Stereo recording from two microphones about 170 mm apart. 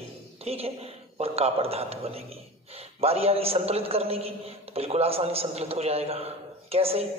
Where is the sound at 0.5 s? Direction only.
35° right (ahead or behind).